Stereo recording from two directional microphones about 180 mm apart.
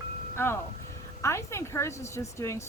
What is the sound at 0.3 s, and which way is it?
A woman's voice, 15° left (ahead or behind).